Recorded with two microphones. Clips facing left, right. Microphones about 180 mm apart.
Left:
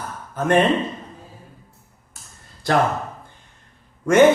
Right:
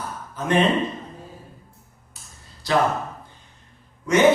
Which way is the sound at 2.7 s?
50° left (ahead or behind).